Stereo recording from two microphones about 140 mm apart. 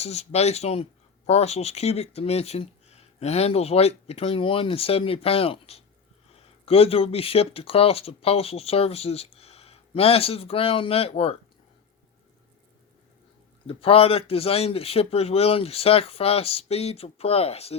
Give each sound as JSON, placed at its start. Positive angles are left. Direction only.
{"t": 0.0, "sound": "speech", "side_deg": 50}
{"t": 13.7, "sound": "speech", "side_deg": 45}